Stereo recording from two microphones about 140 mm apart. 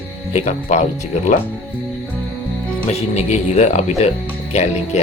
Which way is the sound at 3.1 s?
50° left (ahead or behind).